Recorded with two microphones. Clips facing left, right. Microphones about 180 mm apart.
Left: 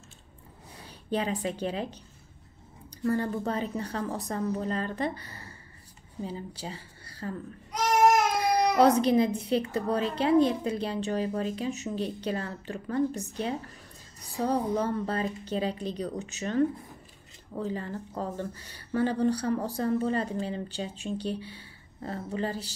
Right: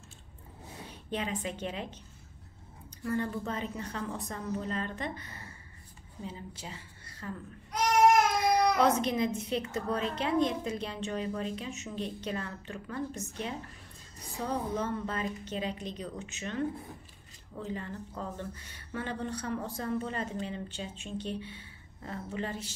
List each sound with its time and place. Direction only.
1.1 s speech: 35° left (ahead or behind)
3.0 s speech: 40° left (ahead or behind)
8.5 s speech: 35° left (ahead or behind)
17.6 s speech: 35° left (ahead or behind)